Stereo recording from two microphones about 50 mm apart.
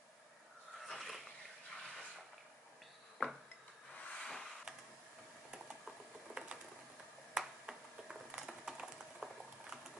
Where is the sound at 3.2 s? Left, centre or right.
Left.